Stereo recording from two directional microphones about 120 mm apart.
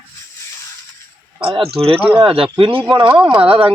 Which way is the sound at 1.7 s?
50° right (ahead or behind).